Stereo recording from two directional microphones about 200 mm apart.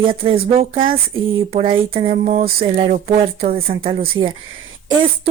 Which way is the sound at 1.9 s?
30° right (ahead or behind).